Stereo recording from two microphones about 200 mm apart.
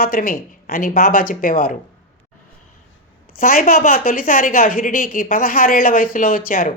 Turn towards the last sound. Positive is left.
turn(degrees=45)  # may be behind; listen again after turning